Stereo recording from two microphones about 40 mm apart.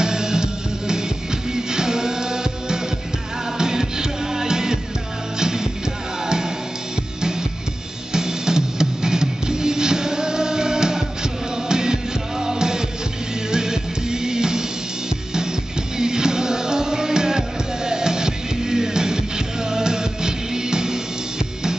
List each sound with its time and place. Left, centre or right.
0.0 s music: centre
8.1 s music: centre
16.0 s music: centre